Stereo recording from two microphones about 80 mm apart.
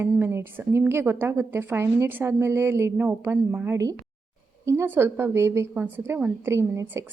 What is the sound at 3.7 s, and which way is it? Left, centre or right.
Speech, right.